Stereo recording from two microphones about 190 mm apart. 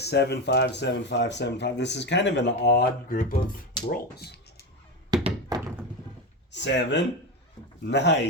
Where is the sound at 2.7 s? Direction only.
55° left (ahead or behind).